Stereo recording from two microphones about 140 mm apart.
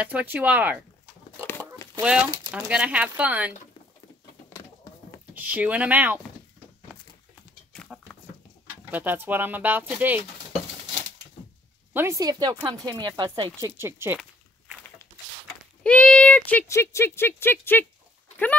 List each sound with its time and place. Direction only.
0.0 s speech: 10° right (ahead or behind)
2.0 s speech: 5° right (ahead or behind)
5.3 s speech: 10° right (ahead or behind)
8.9 s speech: 15° right (ahead or behind)
11.9 s speech: 20° right (ahead or behind)
15.8 s speech: 10° left (ahead or behind)